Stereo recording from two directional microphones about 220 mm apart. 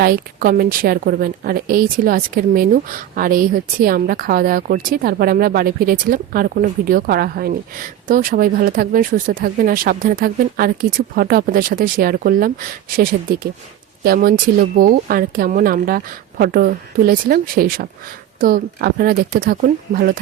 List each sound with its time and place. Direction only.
0.0 s speech: 40° right (ahead or behind)